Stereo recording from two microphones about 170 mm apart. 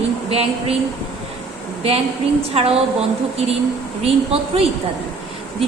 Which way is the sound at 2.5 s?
35° right (ahead or behind).